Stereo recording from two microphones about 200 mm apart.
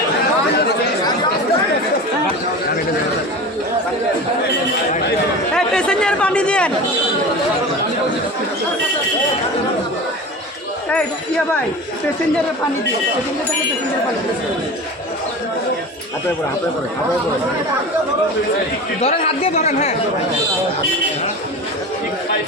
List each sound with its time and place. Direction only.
5.5 s chatter: 5° left (ahead or behind)
18.9 s a man's voice: 30° left (ahead or behind)